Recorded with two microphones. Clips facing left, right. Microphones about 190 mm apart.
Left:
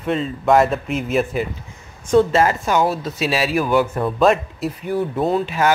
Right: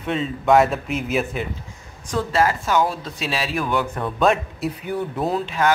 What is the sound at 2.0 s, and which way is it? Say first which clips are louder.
Speech: left 6 dB; 25° left (ahead or behind).